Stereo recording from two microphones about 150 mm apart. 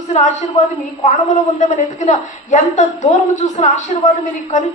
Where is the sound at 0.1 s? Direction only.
50° left (ahead or behind).